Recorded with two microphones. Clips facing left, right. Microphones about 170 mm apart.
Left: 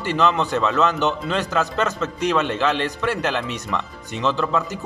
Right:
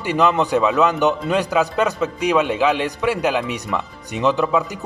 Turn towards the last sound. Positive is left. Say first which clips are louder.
# right 4 dB
turn(degrees=-15)  # may be behind; listen again after turning